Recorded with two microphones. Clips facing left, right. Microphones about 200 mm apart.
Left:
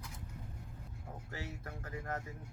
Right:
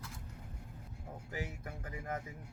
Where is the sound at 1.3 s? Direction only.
15° right (ahead or behind).